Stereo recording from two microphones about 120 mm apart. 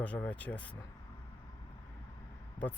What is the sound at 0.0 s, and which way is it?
Speech, 10° left (ahead or behind).